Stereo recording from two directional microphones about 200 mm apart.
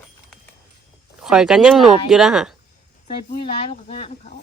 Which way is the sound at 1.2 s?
5° right (ahead or behind).